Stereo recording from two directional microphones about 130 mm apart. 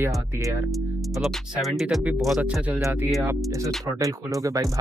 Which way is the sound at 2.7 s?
15° right (ahead or behind).